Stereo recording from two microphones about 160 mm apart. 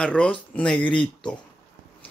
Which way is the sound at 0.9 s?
30° left (ahead or behind).